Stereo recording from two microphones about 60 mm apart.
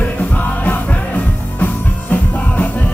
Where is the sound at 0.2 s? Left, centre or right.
Left.